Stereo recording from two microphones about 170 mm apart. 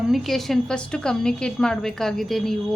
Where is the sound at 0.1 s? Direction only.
Centre (ahead or behind).